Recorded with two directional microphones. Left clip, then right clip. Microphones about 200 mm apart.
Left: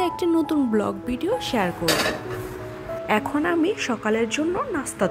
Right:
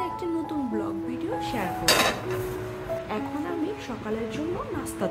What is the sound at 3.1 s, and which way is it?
A woman's voice, 40° left (ahead or behind).